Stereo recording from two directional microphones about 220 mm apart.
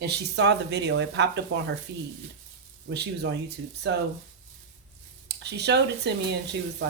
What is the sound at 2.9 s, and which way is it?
Speech, 50° right (ahead or behind).